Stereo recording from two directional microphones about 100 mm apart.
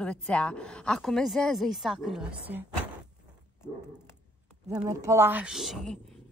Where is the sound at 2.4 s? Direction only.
15° right (ahead or behind).